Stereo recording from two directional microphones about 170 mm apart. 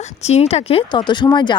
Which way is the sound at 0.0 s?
40° left (ahead or behind).